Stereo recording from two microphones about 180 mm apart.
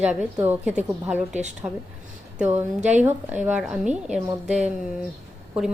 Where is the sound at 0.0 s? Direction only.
5° right (ahead or behind).